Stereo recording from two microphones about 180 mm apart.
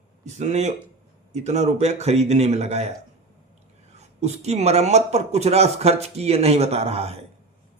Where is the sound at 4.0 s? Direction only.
35° right (ahead or behind).